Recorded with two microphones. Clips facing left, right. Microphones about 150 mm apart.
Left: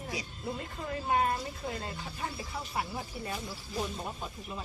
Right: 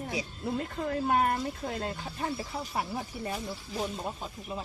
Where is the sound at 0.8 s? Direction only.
60° right (ahead or behind).